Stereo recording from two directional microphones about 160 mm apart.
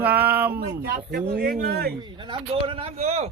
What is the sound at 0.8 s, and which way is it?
Speech, 75° right (ahead or behind).